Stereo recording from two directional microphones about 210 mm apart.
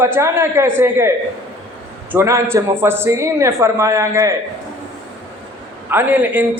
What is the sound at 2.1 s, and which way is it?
A man's voice, 15° right (ahead or behind).